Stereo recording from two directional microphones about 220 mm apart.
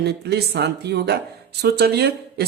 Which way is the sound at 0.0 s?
50° right (ahead or behind).